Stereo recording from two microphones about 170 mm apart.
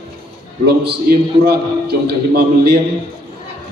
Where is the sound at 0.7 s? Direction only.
70° right (ahead or behind).